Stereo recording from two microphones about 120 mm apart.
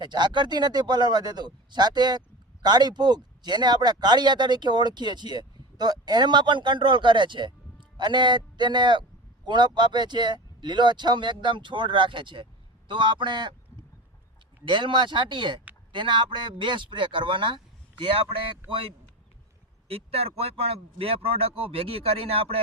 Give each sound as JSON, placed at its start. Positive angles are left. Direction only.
{"t": 0.0, "sound": "speech", "side_deg": -40}
{"t": 14.6, "sound": "speech", "side_deg": -40}
{"t": 19.9, "sound": "speech", "side_deg": -55}